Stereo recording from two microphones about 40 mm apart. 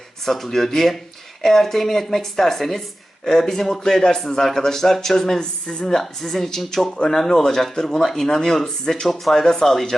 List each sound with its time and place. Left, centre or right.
0.3 s a man's voice: centre
5.4 s speech: left
5.9 s a man's voice: centre